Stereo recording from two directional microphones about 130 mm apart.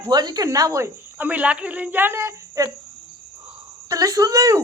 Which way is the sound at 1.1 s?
15° right (ahead or behind).